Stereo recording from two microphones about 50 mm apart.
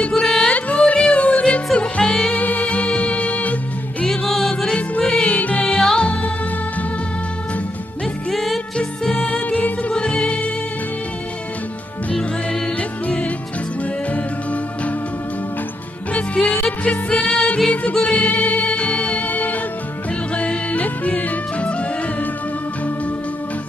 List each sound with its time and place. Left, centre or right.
0.1 s music: centre
0.5 s music: left
2.3 s music: left
4.0 s music: centre
4.6 s music: left
8.3 s music: centre
8.7 s music: left
16.4 s music: centre
17.1 s music: centre